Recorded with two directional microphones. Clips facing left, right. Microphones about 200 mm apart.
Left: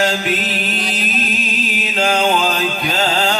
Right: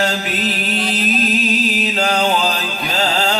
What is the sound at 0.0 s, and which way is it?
Music, 40° right (ahead or behind).